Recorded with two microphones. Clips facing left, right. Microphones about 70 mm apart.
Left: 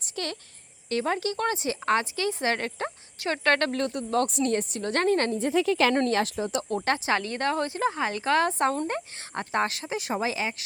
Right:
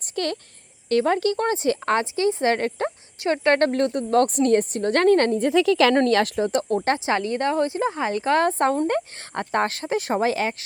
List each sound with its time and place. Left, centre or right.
0.0 s a sound: right
0.9 s a woman's voice: right
5.5 s a woman's voice: right
6.1 s speech: right
6.8 s speech: right
8.9 s speech: right